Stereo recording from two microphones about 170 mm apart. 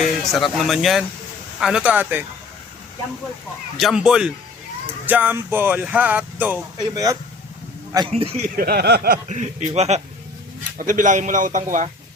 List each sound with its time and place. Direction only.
0.0 s speech: centre (ahead or behind)
3.8 s speech: centre (ahead or behind)
6.7 s speech: 20° right (ahead or behind)
8.1 s a man's voice: 40° right (ahead or behind)
8.5 s a sound: 65° right (ahead or behind)
9.3 s a man's voice: 40° right (ahead or behind)
10.8 s a man's voice: 50° right (ahead or behind)